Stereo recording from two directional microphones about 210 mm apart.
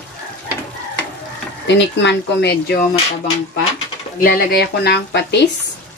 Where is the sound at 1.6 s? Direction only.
55° left (ahead or behind).